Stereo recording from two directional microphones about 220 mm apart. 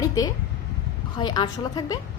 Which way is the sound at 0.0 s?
20° left (ahead or behind).